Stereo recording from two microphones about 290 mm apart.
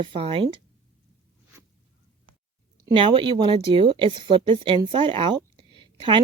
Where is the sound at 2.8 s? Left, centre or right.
Centre.